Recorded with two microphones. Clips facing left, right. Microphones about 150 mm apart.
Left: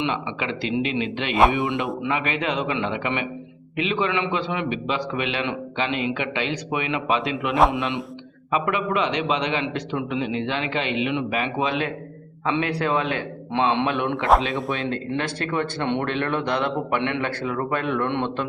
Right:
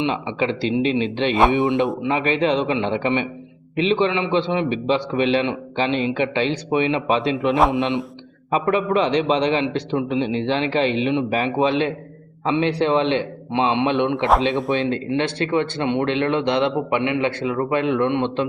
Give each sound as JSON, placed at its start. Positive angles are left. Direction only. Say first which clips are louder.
{"t": 0.0, "sound": "a man's voice", "louder": "right 4 dB", "side_deg": -30}
{"t": 1.3, "sound": "a man's voice", "louder": "right 1 dB", "side_deg": 0}
{"t": 1.5, "sound": "a man's voice", "louder": "right 6 dB", "side_deg": -25}
{"t": 7.5, "sound": "a man's voice", "louder": "even", "side_deg": 0}
{"t": 7.8, "sound": "a man's voice", "louder": "right 5 dB", "side_deg": -25}
{"t": 8.4, "sound": "a man's voice", "louder": "right 4 dB", "side_deg": -35}
{"t": 13.5, "sound": "a man's voice", "louder": "right 2 dB", "side_deg": -15}
{"t": 15.8, "sound": "a man's voice", "louder": "right 4 dB", "side_deg": -10}